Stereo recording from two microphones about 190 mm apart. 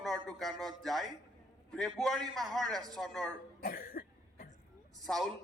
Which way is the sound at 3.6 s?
50° left (ahead or behind).